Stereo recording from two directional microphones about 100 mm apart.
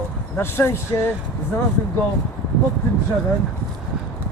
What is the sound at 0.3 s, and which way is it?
Speech, 25° left (ahead or behind).